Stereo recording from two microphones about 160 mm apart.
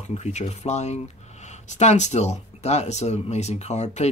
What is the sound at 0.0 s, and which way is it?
Speech, 45° left (ahead or behind).